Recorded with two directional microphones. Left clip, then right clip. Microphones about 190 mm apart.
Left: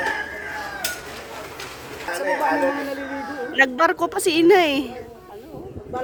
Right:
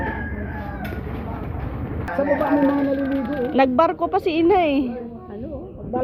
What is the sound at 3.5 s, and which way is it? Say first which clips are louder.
A woman's voice: even; 55° left (ahead or behind).